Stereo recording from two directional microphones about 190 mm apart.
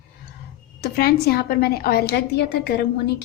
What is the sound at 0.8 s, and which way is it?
A woman's voice, 55° left (ahead or behind).